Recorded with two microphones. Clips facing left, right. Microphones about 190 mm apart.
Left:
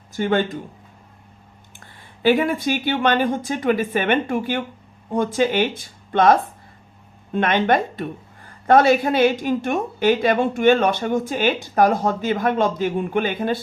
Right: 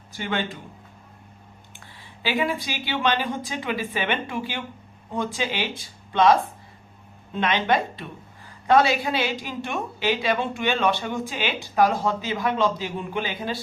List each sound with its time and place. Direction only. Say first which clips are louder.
0.1 s speech: left 8 dB; 45° left (ahead or behind)
1.8 s speech: left 12 dB; 50° left (ahead or behind)
7.3 s speech: left 4 dB; 50° left (ahead or behind)